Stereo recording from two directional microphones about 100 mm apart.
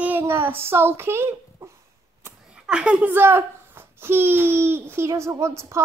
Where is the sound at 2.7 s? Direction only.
10° right (ahead or behind).